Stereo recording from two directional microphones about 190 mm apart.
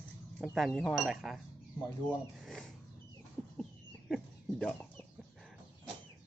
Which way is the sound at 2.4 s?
Centre (ahead or behind).